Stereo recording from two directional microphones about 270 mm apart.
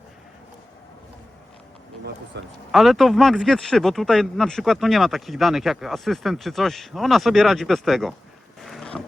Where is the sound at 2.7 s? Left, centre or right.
Centre.